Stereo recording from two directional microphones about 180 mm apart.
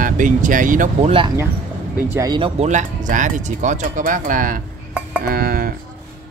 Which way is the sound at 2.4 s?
30° right (ahead or behind).